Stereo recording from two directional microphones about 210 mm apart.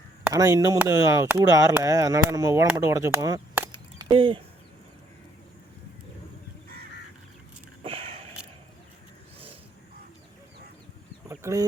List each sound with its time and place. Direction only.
0.3 s speech: 15° right (ahead or behind)
7.9 s a sound: 25° right (ahead or behind)
11.3 s chicken: 15° right (ahead or behind)